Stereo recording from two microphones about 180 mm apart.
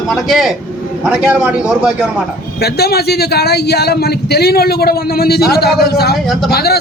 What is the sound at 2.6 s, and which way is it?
A man's voice, 60° left (ahead or behind).